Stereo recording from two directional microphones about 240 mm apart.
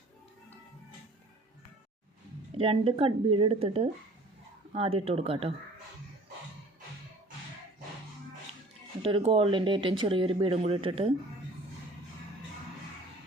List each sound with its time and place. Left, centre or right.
2.6 s speech: right
9.0 s speech: right